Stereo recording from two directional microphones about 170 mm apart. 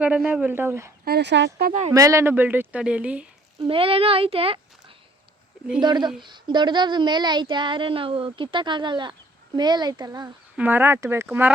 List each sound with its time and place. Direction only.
0.0 s speech: 10° right (ahead or behind)
1.0 s speech: 80° right
1.9 s speech: 20° right (ahead or behind)
3.7 s a child's voice: 35° right (ahead or behind)
10.6 s speech: 10° right (ahead or behind)